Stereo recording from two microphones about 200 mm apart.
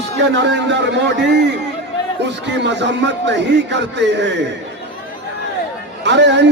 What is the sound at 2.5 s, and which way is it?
A man's voice, 60° right (ahead or behind).